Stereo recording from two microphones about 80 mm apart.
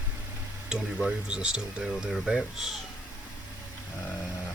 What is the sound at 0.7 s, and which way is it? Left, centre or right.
Speech, centre.